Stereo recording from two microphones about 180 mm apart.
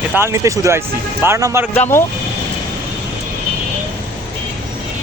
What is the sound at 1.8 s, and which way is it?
Speech, 15° left (ahead or behind).